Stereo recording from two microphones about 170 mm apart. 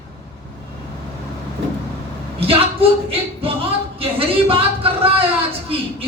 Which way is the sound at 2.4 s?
35° right (ahead or behind).